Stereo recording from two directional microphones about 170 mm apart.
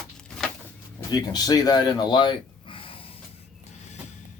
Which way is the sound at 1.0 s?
20° left (ahead or behind).